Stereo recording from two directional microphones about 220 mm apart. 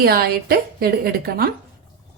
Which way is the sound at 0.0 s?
45° right (ahead or behind).